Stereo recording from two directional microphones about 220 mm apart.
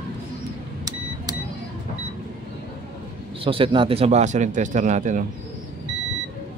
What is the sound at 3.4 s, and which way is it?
A man's voice, 25° right (ahead or behind).